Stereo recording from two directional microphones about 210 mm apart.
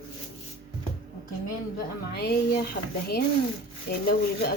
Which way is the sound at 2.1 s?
50° left (ahead or behind).